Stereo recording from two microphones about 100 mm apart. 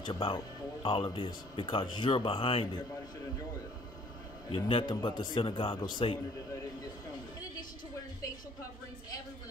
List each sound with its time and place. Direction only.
0.0 s speech: 55° left (ahead or behind)
4.5 s speech: 60° left (ahead or behind)
5.8 s a man's voice: 45° left (ahead or behind)